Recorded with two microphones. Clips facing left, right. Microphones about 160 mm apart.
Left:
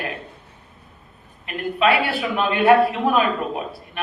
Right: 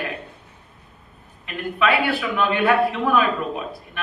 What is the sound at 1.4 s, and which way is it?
A man's voice, 20° left (ahead or behind).